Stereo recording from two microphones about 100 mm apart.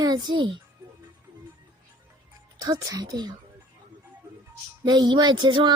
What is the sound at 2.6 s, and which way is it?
Speech, 40° right (ahead or behind).